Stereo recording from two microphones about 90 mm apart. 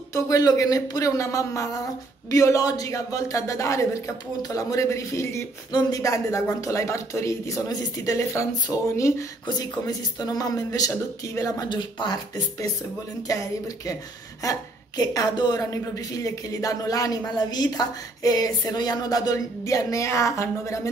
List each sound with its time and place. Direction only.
0.1 s speech: 40° left (ahead or behind)
5.7 s speech: 50° left (ahead or behind); by 8.5 s 35° left (ahead or behind)
9.5 s speech: 45° left (ahead or behind)
11.7 s speech: 55° left (ahead or behind)
13.3 s a woman's voice: 40° left (ahead or behind)
15.6 s speech: 40° left (ahead or behind)